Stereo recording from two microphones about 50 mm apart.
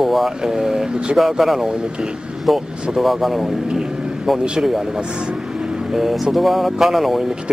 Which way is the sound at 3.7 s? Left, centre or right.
Centre.